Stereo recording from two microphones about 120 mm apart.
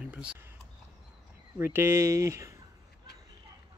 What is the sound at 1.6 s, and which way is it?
Speech, 20° right (ahead or behind).